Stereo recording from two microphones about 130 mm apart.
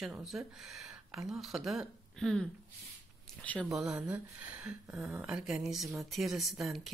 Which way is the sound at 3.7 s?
5° right (ahead or behind).